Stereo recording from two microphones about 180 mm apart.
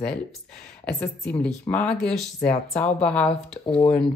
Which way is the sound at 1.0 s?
5° left (ahead or behind).